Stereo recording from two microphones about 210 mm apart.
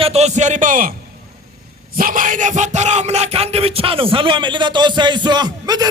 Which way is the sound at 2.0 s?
40° right (ahead or behind).